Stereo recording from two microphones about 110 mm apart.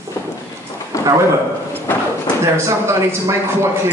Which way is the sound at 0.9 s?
30° left (ahead or behind).